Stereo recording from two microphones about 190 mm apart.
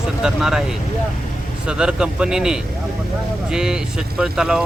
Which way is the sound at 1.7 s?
5° right (ahead or behind).